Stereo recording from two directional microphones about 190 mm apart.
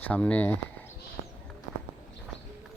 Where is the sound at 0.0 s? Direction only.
5° left (ahead or behind).